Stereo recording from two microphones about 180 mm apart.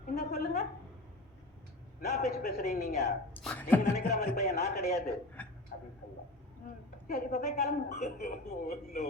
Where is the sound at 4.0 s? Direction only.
55° left (ahead or behind).